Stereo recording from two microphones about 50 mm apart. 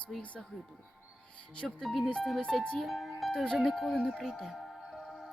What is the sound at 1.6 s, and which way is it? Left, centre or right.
Speech, centre.